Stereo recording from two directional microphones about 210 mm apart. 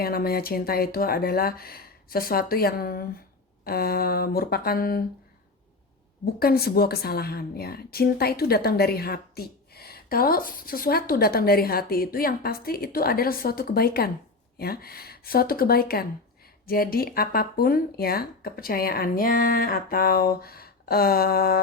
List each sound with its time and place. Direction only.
0.0 s a woman's voice: 45° left (ahead or behind)
6.4 s a woman's voice: 45° left (ahead or behind)